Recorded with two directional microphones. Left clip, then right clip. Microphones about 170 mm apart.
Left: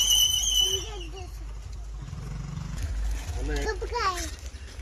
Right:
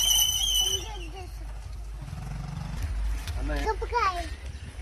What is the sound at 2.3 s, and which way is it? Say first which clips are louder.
Vehicle: right 1 dB; 35° right (ahead or behind).